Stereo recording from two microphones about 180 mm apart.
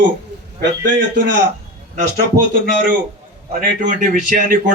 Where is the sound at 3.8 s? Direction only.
50° right (ahead or behind).